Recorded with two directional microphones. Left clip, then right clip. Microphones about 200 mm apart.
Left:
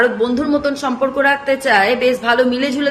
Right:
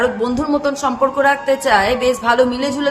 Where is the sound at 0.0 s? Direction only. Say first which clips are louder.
Left 2 dB; 15° right (ahead or behind).